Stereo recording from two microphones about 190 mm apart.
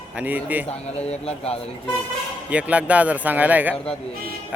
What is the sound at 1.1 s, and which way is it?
Speech, 30° left (ahead or behind).